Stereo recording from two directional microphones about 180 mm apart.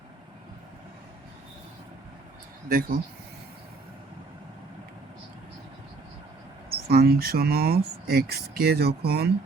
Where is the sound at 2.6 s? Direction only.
50° right (ahead or behind).